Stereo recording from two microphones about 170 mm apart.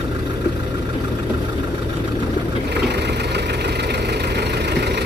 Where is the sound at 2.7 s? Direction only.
75° right (ahead or behind).